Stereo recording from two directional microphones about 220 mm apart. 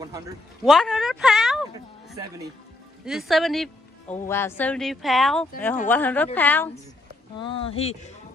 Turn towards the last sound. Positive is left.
turn(degrees=25)  # may be behind; listen again after turning